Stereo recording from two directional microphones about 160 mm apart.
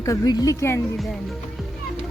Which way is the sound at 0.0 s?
20° left (ahead or behind).